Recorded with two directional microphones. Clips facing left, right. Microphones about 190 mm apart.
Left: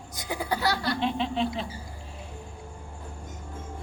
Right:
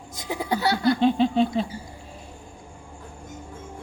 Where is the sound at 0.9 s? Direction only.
35° right (ahead or behind).